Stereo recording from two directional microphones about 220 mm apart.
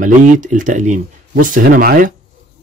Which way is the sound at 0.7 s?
35° right (ahead or behind).